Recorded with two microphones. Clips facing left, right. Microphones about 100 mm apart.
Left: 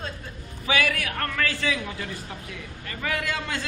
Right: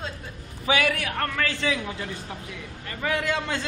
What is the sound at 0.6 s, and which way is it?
A man's voice, 20° right (ahead or behind).